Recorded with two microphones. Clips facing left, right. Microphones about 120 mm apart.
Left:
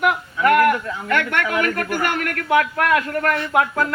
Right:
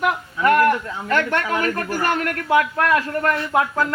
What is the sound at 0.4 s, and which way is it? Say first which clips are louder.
A man's voice: left 1 dB; 30° right (ahead or behind).